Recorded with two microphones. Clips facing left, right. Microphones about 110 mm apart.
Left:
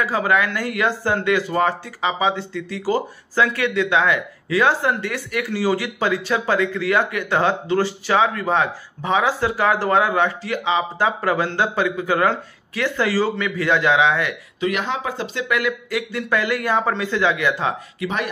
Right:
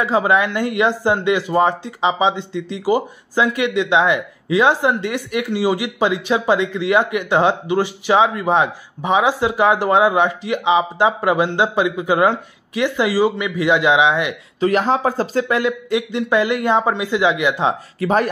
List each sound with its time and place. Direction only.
0.0 s speech: 20° right (ahead or behind)
14.6 s speech: 35° right (ahead or behind); by 17.7 s 20° right (ahead or behind)
18.0 s speech: 40° right (ahead or behind)